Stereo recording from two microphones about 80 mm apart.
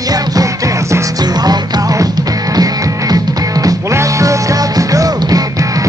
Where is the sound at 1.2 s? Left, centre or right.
Right.